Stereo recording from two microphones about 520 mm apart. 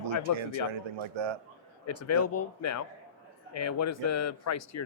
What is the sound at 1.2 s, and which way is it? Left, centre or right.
Speech, right.